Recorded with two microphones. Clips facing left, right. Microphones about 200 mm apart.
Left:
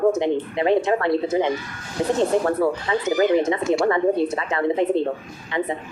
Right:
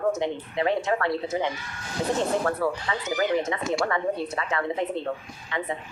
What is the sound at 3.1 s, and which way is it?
Speech, 30° left (ahead or behind).